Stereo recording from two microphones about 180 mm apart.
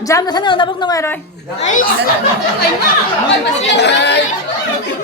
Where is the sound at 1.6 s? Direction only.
45° left (ahead or behind).